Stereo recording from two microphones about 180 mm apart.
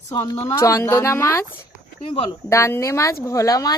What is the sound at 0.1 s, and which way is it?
A woman's voice, 20° left (ahead or behind).